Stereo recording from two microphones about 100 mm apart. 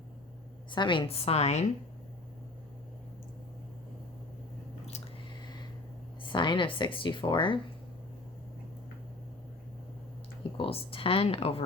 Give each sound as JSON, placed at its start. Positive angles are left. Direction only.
{"t": 0.7, "sound": "a woman's voice", "side_deg": 55}
{"t": 1.0, "sound": "a woman's voice", "side_deg": 80}
{"t": 6.2, "sound": "speech", "side_deg": 55}
{"t": 10.6, "sound": "speech", "side_deg": 70}